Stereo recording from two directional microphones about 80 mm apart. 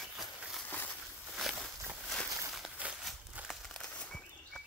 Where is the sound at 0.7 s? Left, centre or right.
Left.